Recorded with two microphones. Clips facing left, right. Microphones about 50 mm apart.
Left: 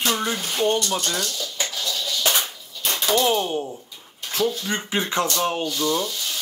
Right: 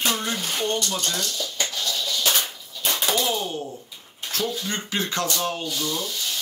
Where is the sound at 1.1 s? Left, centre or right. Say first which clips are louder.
Left 1 dB; centre.